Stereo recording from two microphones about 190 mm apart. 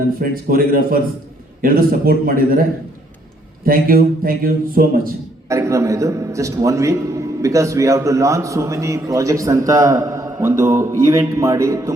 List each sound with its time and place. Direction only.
0.2 s a man's voice: 50° right (ahead or behind)
3.7 s a man's voice: 50° right (ahead or behind)
5.5 s a man's voice: 15° right (ahead or behind)